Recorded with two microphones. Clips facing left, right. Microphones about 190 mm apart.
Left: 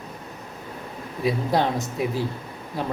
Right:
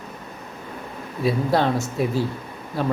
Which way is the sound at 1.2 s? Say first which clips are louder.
Right 2 dB; 15° left (ahead or behind).